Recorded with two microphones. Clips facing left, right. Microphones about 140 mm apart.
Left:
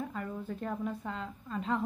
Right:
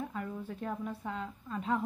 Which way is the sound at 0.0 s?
5° right (ahead or behind).